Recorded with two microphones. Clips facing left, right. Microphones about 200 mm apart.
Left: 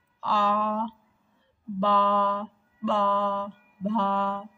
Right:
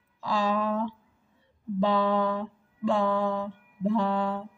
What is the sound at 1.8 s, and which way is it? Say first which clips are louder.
Mantra: even; 15° right (ahead or behind).